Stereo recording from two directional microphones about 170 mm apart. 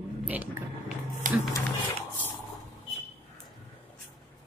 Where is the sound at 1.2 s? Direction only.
50° right (ahead or behind).